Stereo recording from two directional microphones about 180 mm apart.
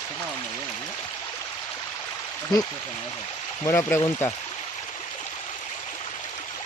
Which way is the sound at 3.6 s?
15° left (ahead or behind).